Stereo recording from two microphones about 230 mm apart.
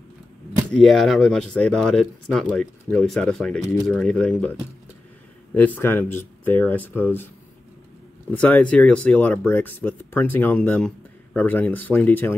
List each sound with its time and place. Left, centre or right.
0.7 s speech: centre
8.3 s speech: centre